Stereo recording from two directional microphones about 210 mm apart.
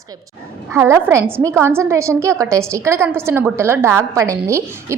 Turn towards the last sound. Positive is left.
turn(degrees=-10)  # may be behind; listen again after turning